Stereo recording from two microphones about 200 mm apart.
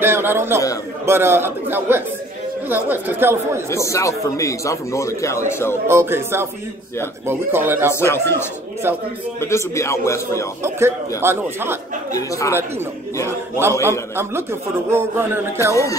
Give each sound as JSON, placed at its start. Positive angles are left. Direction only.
{"t": 0.0, "sound": "a man's voice", "side_deg": -10}
{"t": 3.7, "sound": "speech", "side_deg": 15}
{"t": 5.9, "sound": "a man's voice", "side_deg": -10}
{"t": 7.9, "sound": "speech", "side_deg": 10}
{"t": 8.8, "sound": "a man's voice", "side_deg": -10}
{"t": 9.4, "sound": "speech", "side_deg": 15}
{"t": 10.6, "sound": "a man's voice", "side_deg": -10}
{"t": 12.1, "sound": "speech", "side_deg": 15}
{"t": 13.8, "sound": "a man's voice", "side_deg": -10}